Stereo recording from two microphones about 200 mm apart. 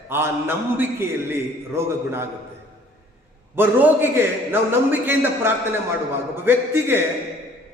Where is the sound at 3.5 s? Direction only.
10° right (ahead or behind).